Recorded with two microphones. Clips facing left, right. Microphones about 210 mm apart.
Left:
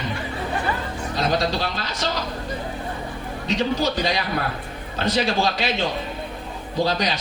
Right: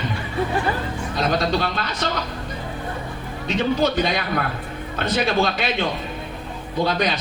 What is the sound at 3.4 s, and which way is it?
A man's voice, 55° right (ahead or behind).